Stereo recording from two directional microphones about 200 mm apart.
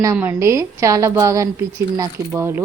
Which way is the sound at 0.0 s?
15° right (ahead or behind).